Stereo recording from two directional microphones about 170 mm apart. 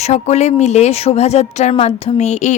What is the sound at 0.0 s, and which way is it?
Speech, 40° left (ahead or behind).